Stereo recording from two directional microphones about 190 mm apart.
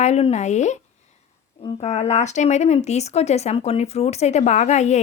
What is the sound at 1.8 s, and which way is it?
A woman's voice, 35° left (ahead or behind).